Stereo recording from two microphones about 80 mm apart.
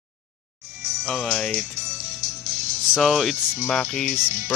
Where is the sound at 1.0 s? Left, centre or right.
Centre.